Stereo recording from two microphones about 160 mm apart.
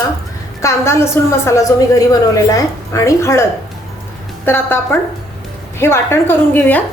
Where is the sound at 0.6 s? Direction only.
15° left (ahead or behind).